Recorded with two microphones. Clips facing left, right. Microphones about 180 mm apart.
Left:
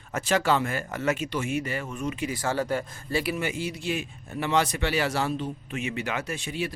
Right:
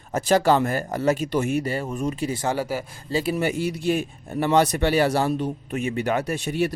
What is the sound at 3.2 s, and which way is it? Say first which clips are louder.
Speech: right 9 dB; 35° right (ahead or behind).